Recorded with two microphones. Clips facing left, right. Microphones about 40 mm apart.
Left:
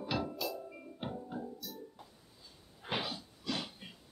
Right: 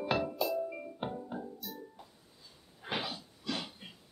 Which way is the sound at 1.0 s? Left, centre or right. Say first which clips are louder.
Right 1 dB; right.